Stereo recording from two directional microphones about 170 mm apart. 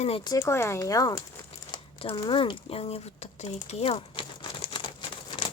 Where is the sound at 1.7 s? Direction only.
30° left (ahead or behind).